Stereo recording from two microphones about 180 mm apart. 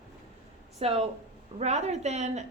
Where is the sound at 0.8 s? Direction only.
35° right (ahead or behind).